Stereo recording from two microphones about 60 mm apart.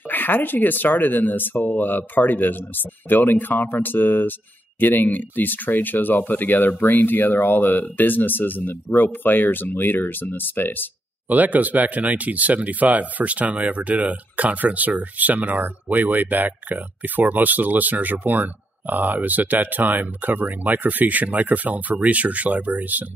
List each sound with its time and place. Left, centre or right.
0.1 s speech: left
11.2 s speech: right